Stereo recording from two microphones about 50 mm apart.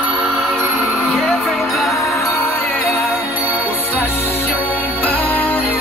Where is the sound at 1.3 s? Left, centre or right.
Centre.